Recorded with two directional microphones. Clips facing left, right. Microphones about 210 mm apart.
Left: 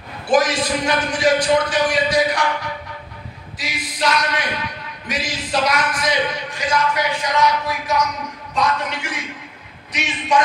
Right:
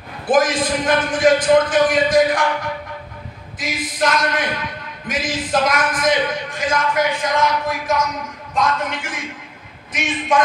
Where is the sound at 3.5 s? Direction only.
50° right (ahead or behind).